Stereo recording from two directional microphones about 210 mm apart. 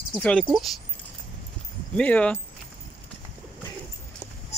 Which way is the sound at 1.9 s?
5° left (ahead or behind).